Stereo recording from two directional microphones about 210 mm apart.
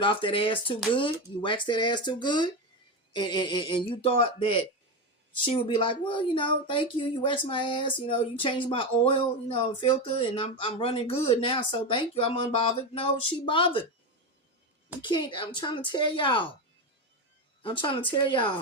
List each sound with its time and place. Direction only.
0.0 s speech: 25° left (ahead or behind)
15.0 s speech: 20° left (ahead or behind)
17.6 s speech: 25° left (ahead or behind)